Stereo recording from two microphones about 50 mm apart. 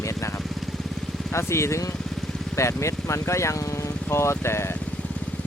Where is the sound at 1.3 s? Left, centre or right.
Left.